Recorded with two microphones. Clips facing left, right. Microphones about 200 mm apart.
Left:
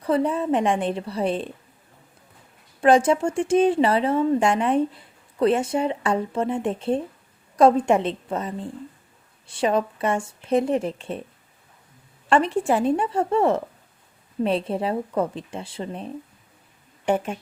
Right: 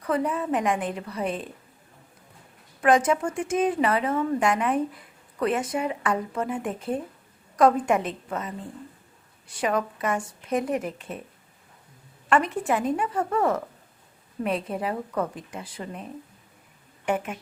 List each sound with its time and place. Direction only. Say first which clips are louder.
0.0 s speech: left 4 dB; 30° left (ahead or behind)
2.8 s speech: left 4 dB; 30° left (ahead or behind)
12.3 s a woman's voice: left 3 dB; 30° left (ahead or behind)